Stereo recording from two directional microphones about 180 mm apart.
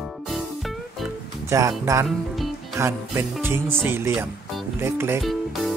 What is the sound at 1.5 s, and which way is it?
Speech, 15° right (ahead or behind).